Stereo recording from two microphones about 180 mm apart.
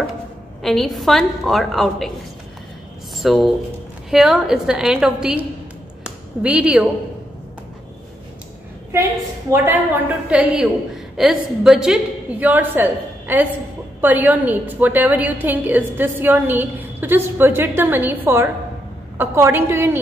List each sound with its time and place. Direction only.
0.6 s a woman's voice: centre (ahead or behind)
3.2 s a woman's voice: centre (ahead or behind)
9.5 s a woman's voice: 10° right (ahead or behind)